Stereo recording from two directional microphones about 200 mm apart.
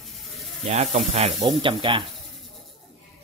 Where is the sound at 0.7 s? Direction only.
35° right (ahead or behind).